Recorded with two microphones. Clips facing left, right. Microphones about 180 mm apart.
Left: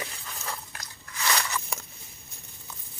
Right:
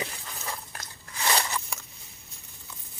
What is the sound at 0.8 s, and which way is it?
Biting, 30° right (ahead or behind).